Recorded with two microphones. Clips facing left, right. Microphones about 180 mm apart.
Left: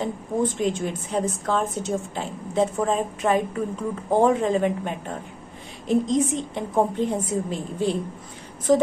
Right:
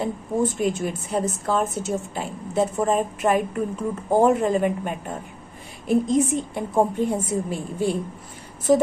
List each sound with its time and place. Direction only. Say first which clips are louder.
0.0 s a woman's voice: right 1 dB; 5° right (ahead or behind)